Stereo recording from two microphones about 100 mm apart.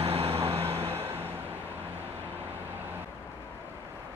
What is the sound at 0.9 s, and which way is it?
Vehicle, 25° right (ahead or behind).